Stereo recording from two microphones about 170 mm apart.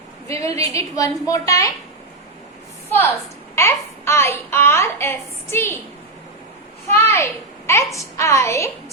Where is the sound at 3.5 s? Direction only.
15° left (ahead or behind).